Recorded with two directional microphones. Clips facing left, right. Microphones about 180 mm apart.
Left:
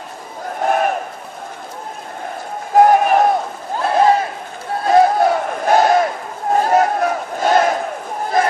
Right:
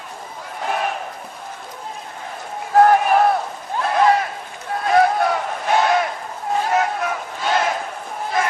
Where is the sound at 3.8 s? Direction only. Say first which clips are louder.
Left 3 dB; 30° left (ahead or behind).